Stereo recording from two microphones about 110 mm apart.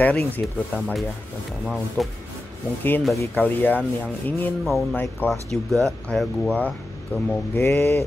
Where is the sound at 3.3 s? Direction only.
20° left (ahead or behind).